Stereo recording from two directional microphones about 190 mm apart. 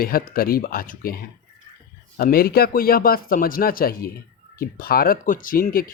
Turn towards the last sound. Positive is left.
turn(degrees=50)  # may be behind; listen again after turning